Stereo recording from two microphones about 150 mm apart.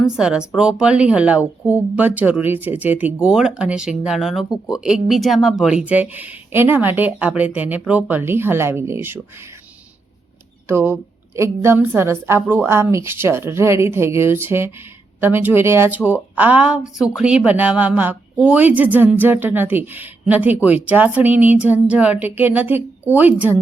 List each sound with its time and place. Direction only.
0.0 s speech: 5° right (ahead or behind)
10.7 s speech: 15° right (ahead or behind)